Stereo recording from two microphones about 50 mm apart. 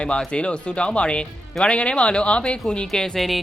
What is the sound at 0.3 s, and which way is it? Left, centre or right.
Speech, left.